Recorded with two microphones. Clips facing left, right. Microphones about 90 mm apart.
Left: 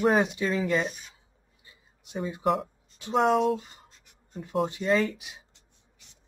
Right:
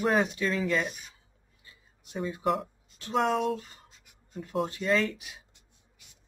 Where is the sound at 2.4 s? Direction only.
Centre (ahead or behind).